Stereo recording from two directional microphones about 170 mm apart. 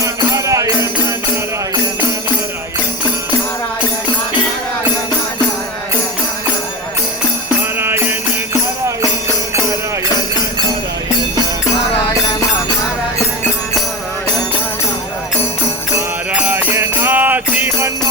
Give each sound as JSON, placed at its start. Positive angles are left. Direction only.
{"t": 0.0, "sound": "music", "side_deg": -20}
{"t": 7.8, "sound": "music", "side_deg": -15}
{"t": 16.0, "sound": "music", "side_deg": -10}